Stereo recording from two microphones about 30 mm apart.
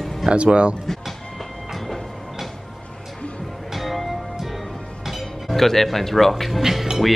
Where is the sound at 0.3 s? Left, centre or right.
Right.